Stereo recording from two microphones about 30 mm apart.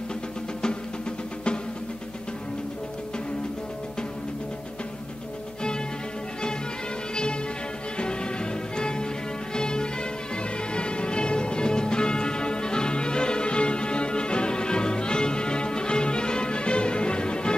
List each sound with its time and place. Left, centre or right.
8.0 s music: left